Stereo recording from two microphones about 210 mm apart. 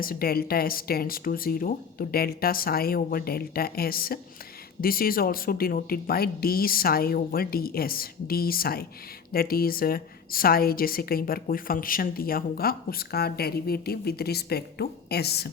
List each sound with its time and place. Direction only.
0.0 s a woman's voice: 45° left (ahead or behind)